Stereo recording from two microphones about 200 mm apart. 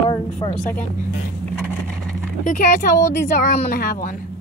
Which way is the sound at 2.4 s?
40° left (ahead or behind).